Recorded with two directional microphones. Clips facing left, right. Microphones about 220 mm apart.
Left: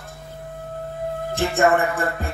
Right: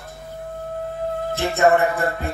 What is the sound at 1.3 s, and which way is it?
Speech, 50° left (ahead or behind).